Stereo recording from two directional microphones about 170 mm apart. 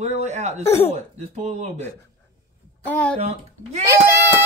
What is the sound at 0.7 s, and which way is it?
Speech, 35° left (ahead or behind).